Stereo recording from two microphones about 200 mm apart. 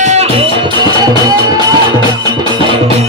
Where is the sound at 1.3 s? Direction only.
20° right (ahead or behind).